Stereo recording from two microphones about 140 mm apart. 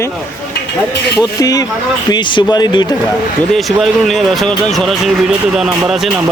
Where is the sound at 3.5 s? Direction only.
Centre (ahead or behind).